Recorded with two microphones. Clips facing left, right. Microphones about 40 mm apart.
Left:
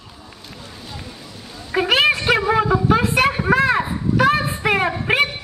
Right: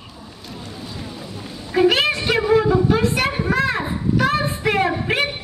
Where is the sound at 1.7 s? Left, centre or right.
Centre.